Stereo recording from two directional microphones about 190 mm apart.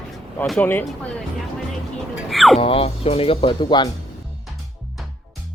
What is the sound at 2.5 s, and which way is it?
Speech, 30° left (ahead or behind).